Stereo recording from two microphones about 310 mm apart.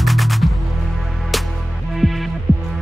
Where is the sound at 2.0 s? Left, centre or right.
Centre.